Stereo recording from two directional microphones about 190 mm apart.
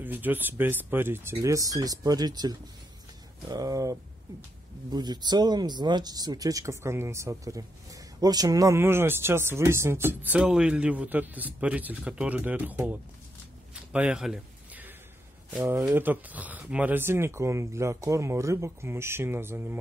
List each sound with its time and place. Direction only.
0.0 s speech: 10° right (ahead or behind)
13.9 s a sound: 5° right (ahead or behind)
15.5 s speech: 10° right (ahead or behind)